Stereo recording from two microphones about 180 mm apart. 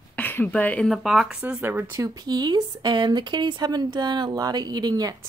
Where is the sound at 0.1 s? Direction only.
10° left (ahead or behind).